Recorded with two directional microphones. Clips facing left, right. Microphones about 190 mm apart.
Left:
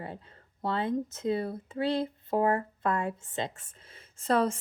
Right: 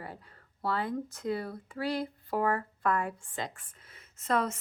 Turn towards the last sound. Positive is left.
turn(degrees=30)  # may be behind; listen again after turning